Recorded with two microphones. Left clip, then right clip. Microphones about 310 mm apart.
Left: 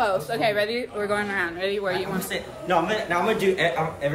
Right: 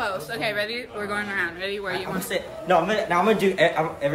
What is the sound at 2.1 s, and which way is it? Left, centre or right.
A man's voice, centre.